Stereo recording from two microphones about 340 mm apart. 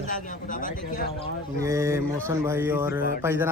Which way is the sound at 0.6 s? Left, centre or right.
Left.